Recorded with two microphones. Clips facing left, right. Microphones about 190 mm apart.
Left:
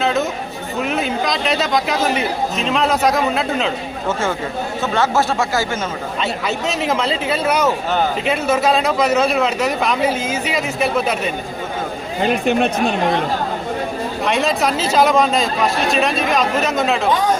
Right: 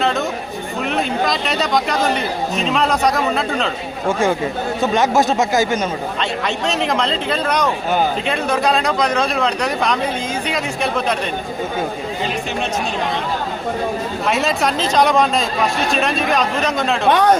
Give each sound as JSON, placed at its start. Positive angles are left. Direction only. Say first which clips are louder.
{"t": 0.0, "sound": "chatter", "louder": "left 1 dB", "side_deg": 0}
{"t": 0.9, "sound": "speech", "louder": "right 2 dB", "side_deg": 0}
{"t": 4.8, "sound": "speech", "louder": "right 2 dB", "side_deg": -15}
{"t": 6.7, "sound": "speech", "louder": "even", "side_deg": 5}
{"t": 12.2, "sound": "speech", "louder": "left 9 dB", "side_deg": 55}
{"t": 14.3, "sound": "speech", "louder": "left 1 dB", "side_deg": 0}
{"t": 17.1, "sound": "speech", "louder": "right 7 dB", "side_deg": -70}